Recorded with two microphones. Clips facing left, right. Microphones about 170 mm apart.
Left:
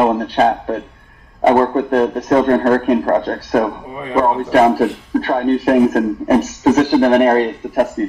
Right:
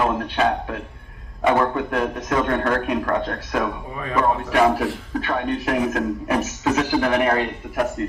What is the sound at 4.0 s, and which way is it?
A man's voice, 25° left (ahead or behind).